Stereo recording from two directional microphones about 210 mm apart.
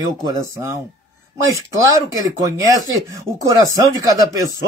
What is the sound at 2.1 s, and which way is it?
Speech, 15° right (ahead or behind).